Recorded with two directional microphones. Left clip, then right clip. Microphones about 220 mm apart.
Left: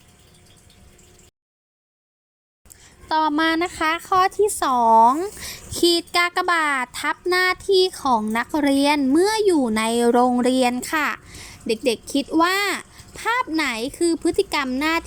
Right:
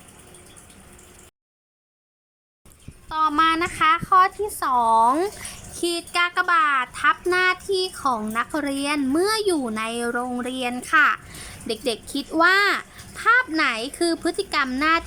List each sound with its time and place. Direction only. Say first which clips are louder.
3.1 s a woman's voice: even; 25° left (ahead or behind)